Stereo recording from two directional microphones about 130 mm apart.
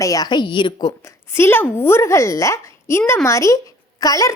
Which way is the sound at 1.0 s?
20° left (ahead or behind).